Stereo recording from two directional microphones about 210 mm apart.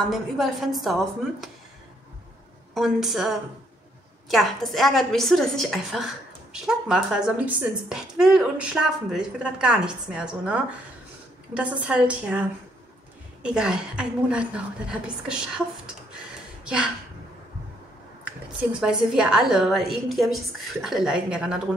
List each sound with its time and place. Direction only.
0.0 s a woman's voice: centre (ahead or behind)
2.7 s a woman's voice: centre (ahead or behind)
11.8 s a woman's voice: 5° right (ahead or behind)
16.6 s speech: 5° right (ahead or behind)
18.2 s a woman's voice: 5° right (ahead or behind)